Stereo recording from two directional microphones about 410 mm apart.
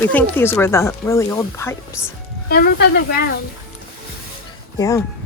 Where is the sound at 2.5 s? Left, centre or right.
Left.